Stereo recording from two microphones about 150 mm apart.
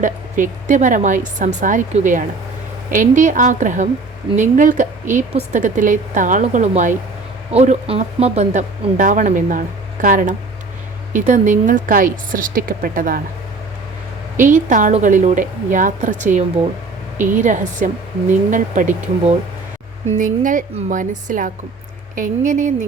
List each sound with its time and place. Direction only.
0.0 s speech: 60° right (ahead or behind)
14.3 s speech: 60° right (ahead or behind)